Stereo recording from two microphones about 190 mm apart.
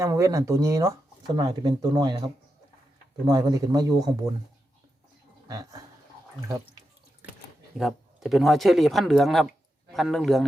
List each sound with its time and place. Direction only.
0.0 s a man's voice: 15° right (ahead or behind)
5.5 s a man's voice: 20° right (ahead or behind)
7.8 s speech: centre (ahead or behind)